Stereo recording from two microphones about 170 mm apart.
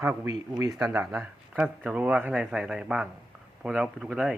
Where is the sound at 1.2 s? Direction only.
5° right (ahead or behind).